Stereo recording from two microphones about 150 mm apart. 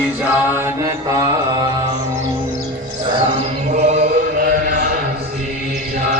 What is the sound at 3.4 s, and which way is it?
Chant, 45° right (ahead or behind).